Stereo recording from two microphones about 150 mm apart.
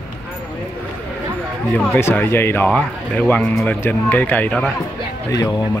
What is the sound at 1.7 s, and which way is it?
Speech, 15° left (ahead or behind).